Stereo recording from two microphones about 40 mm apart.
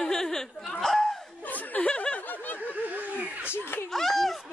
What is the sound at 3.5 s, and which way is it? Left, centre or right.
Snicker, left.